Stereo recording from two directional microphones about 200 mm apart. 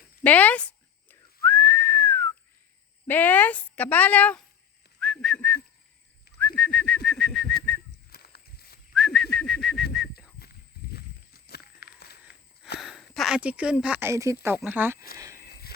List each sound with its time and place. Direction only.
0.2 s whistling: 10° left (ahead or behind)
3.1 s a woman's voice: 10° left (ahead or behind)
4.9 s whistling: 5° left (ahead or behind)
6.6 s bird: 5° left (ahead or behind)
8.1 s walk: 50° left (ahead or behind)
9.0 s bird: centre (ahead or behind)
9.9 s a sound: centre (ahead or behind)
10.9 s a sound: 50° left (ahead or behind)
12.8 s speech: centre (ahead or behind)
15.2 s a sound: 15° right (ahead or behind)